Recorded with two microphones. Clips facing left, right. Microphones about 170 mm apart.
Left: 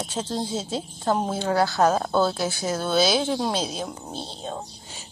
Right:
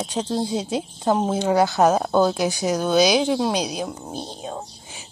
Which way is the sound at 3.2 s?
Centre (ahead or behind).